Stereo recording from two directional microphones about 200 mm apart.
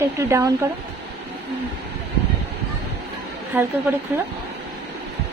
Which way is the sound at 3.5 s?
10° right (ahead or behind).